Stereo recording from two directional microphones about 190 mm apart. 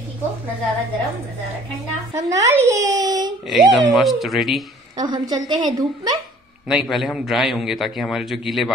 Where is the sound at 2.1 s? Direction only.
15° right (ahead or behind).